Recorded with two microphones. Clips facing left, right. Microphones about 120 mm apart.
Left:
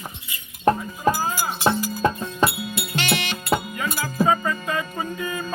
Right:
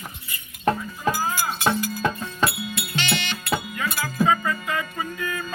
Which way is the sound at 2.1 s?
20° left (ahead or behind).